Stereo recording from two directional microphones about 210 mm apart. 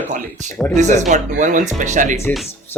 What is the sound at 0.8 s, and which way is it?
Speech, 35° right (ahead or behind).